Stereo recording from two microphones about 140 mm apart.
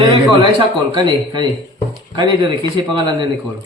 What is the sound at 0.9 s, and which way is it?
Speech, 30° right (ahead or behind).